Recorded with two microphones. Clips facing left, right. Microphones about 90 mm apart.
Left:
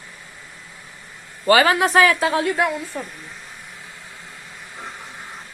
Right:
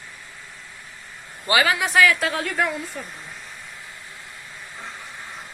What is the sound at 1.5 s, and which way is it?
Speech, 40° left (ahead or behind).